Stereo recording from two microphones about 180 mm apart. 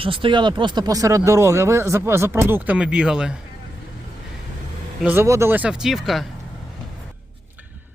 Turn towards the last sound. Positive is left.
turn(degrees=0)  # may be behind; listen again after turning